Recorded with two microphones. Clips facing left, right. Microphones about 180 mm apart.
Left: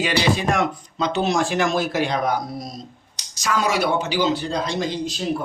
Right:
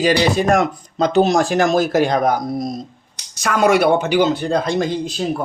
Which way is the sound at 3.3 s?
55° right (ahead or behind).